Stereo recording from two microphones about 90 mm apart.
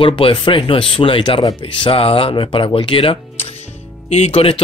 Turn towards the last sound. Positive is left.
turn(degrees=90)